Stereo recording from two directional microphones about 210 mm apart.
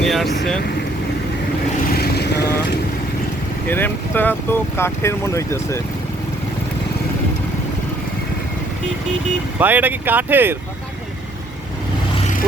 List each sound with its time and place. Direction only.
0.0 s speech: centre (ahead or behind)
2.0 s vehicle: 50° left (ahead or behind)
3.7 s speech: 10° left (ahead or behind)
9.6 s speech: 10° right (ahead or behind)